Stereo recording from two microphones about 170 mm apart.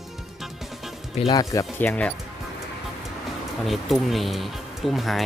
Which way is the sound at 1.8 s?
10° left (ahead or behind).